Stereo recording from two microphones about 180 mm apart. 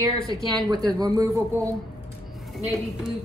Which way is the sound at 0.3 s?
20° right (ahead or behind).